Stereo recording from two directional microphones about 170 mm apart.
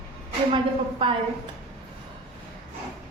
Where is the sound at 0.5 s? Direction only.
30° right (ahead or behind).